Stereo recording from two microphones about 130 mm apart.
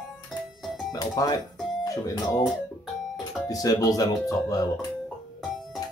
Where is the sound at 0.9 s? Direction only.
30° left (ahead or behind).